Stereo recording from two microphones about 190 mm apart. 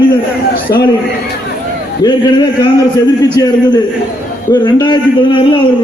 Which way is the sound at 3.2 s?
20° left (ahead or behind).